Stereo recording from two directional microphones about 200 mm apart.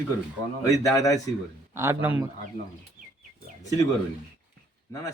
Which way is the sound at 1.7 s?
10° right (ahead or behind).